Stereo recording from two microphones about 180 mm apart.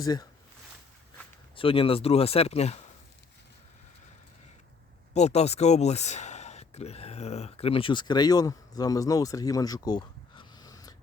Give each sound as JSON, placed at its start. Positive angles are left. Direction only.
{"t": 0.0, "sound": "speech", "side_deg": 20}
{"t": 1.5, "sound": "speech", "side_deg": 30}
{"t": 5.1, "sound": "speech", "side_deg": 35}